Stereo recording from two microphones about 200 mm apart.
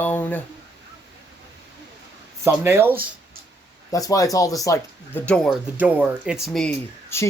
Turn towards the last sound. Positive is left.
turn(degrees=15)  # may be behind; listen again after turning